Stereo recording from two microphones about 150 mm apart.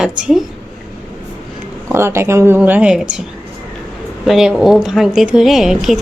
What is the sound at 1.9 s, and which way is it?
A woman's voice, 15° right (ahead or behind).